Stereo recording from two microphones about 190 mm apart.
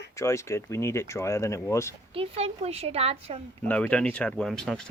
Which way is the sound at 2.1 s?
30° right (ahead or behind).